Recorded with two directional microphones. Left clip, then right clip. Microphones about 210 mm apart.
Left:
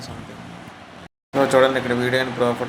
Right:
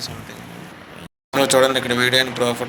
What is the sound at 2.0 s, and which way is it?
Speech, 50° right (ahead or behind).